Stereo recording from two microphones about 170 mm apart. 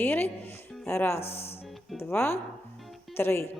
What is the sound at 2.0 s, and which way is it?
Speech, 15° left (ahead or behind).